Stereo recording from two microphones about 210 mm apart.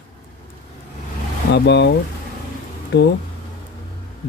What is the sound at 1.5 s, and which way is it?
Speech, 55° left (ahead or behind).